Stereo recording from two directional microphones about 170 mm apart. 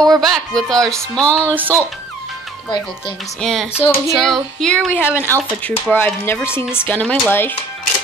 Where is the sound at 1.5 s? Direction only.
10° right (ahead or behind).